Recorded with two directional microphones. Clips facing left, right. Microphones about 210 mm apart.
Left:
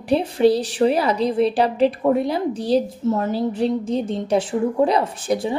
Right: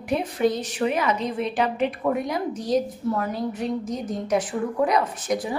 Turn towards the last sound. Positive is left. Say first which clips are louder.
# left 4 dB
turn(degrees=30)  # may be behind; listen again after turning